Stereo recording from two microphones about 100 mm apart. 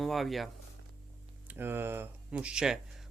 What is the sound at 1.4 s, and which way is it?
Speech, 20° right (ahead or behind).